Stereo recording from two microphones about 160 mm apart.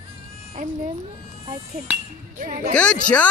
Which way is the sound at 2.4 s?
60° right (ahead or behind).